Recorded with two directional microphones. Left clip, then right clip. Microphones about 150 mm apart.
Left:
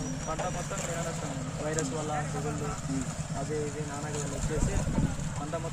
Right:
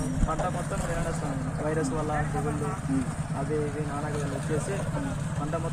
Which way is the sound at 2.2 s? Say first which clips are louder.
Right 4 dB; 90° left.